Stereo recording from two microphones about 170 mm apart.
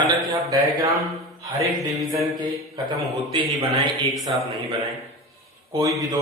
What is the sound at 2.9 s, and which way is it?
Speech, 30° right (ahead or behind).